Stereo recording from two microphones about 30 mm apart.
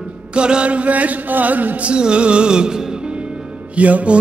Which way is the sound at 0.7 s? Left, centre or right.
Right.